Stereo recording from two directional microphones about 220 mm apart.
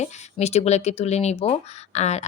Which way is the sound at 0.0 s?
30° left (ahead or behind).